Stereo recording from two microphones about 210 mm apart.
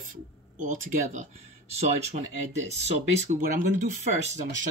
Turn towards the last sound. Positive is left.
turn(degrees=-35)  # may be behind; listen again after turning